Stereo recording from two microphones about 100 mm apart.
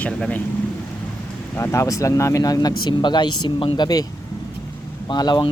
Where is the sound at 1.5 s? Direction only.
25° left (ahead or behind).